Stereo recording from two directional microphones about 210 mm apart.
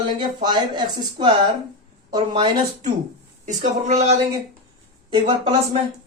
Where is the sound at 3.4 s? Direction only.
35° right (ahead or behind).